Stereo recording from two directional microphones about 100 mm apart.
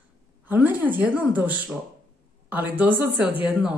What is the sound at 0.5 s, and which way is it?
Speech, 20° right (ahead or behind).